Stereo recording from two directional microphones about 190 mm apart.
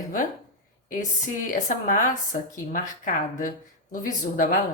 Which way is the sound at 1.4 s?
45° left (ahead or behind).